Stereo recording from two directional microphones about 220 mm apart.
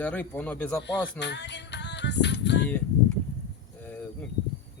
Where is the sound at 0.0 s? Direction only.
5° left (ahead or behind).